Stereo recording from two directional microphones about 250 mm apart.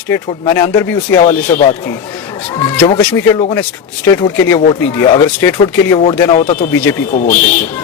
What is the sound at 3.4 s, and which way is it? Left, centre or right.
A man's voice, centre.